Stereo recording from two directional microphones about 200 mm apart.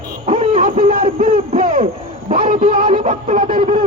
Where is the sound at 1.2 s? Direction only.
45° right (ahead or behind).